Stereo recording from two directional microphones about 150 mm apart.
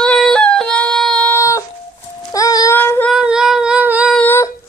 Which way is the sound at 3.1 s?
5° right (ahead or behind).